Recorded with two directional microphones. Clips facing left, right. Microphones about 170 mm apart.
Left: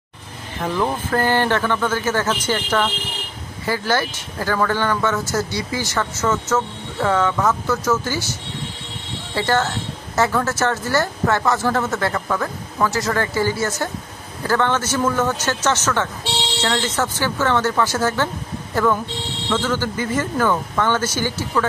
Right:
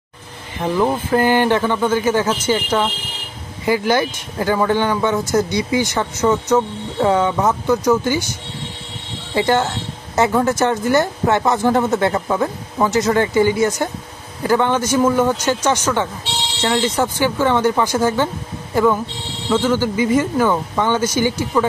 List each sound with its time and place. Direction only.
0.6 s speech: 10° right (ahead or behind)
9.3 s speech: 20° right (ahead or behind)